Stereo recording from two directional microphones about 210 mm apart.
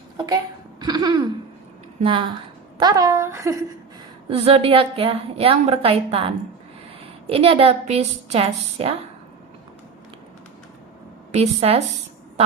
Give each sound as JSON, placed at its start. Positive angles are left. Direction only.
{"t": 0.8, "sound": "a woman's voice", "side_deg": -20}
{"t": 4.3, "sound": "a woman's voice", "side_deg": -30}
{"t": 11.3, "sound": "a woman's voice", "side_deg": -30}